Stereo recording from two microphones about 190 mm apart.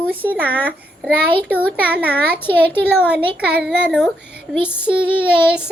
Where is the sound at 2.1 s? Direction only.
10° left (ahead or behind).